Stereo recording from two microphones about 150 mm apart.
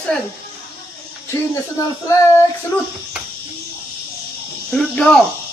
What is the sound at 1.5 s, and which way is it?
Speech, 20° left (ahead or behind).